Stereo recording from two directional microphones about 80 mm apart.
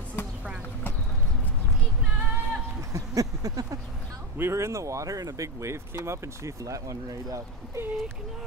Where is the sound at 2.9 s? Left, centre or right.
Right.